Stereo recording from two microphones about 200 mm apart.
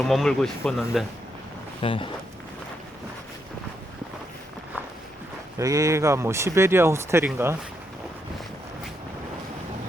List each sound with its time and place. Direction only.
0.0 s speech: centre (ahead or behind)
1.8 s speech: 25° left (ahead or behind)
5.5 s speech: 15° right (ahead or behind)